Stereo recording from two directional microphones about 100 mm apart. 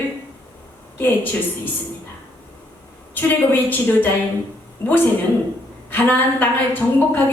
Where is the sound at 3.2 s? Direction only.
20° left (ahead or behind).